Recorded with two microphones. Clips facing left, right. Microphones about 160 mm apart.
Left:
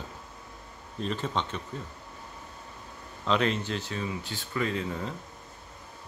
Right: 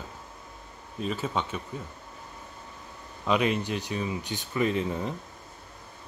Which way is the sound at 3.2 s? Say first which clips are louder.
Right 1 dB; 10° right (ahead or behind).